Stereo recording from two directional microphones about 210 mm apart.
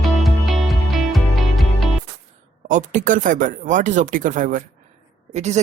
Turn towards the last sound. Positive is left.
turn(degrees=-35)  # may be behind; listen again after turning